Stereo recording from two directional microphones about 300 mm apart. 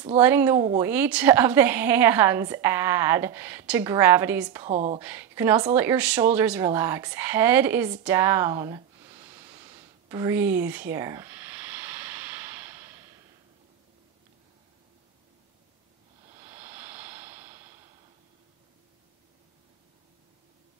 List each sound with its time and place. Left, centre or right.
0.2 s a woman's voice: centre
4.6 s speech: right
5.0 s a woman's voice: centre
8.0 s a sound: centre
16.3 s vehicle: centre